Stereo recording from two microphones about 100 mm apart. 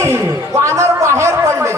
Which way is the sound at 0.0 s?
25° right (ahead or behind).